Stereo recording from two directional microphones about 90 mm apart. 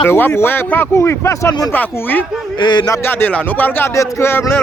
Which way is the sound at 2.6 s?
55° left (ahead or behind).